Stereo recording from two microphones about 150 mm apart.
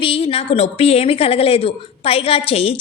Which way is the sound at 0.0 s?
40° left (ahead or behind).